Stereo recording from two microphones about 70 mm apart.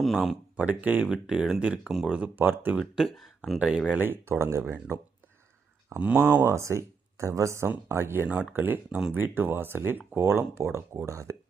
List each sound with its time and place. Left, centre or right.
0.0 s speech: centre
0.5 s speech: right
1.1 s speech: centre; by 2.7 s right
2.7 s speech: centre
3.6 s speech: centre
3.9 s speech: right
6.0 s speech: centre
6.4 s speech: right